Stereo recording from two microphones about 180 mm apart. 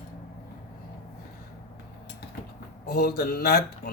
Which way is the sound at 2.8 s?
60° left (ahead or behind).